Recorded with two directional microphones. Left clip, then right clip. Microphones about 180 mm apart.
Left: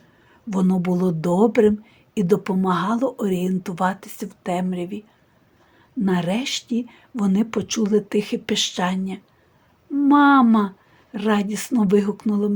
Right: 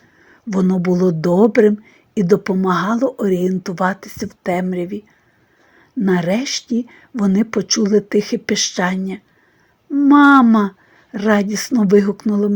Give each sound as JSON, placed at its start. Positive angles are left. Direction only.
{"t": 0.4, "sound": "a woman's voice", "side_deg": -20}
{"t": 6.1, "sound": "a woman's voice", "side_deg": -25}
{"t": 9.9, "sound": "a sound", "side_deg": -15}
{"t": 10.2, "sound": "a woman's voice", "side_deg": -25}